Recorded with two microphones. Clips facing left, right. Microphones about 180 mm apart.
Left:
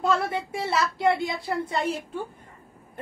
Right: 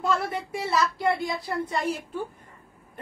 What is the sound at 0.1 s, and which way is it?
A woman's voice, 25° left (ahead or behind).